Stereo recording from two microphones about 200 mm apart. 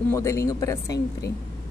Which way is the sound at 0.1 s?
15° left (ahead or behind).